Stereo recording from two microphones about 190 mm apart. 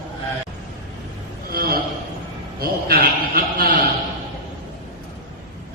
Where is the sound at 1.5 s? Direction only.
50° right (ahead or behind).